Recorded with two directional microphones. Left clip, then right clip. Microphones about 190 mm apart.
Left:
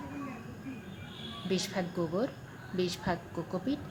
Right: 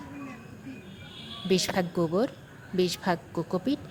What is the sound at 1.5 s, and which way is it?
A woman's voice, 45° right (ahead or behind).